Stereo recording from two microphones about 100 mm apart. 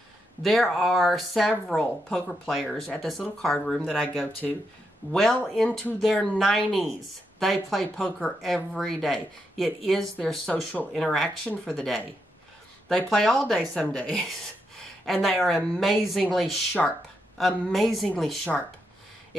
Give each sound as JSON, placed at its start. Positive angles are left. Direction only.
{"t": 0.4, "sound": "speech", "side_deg": 0}